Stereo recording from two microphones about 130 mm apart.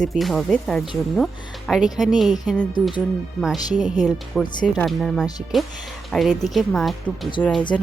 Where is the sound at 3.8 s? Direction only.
5° right (ahead or behind).